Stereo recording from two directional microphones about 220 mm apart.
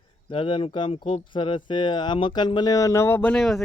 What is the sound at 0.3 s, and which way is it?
Speech, 20° left (ahead or behind).